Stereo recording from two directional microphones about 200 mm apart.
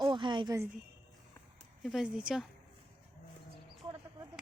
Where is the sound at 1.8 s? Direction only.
Centre (ahead or behind).